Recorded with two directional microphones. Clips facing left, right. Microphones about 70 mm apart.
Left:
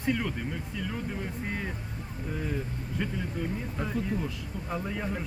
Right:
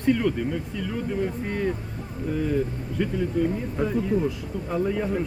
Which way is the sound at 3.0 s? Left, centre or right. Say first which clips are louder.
Right 7 dB; centre.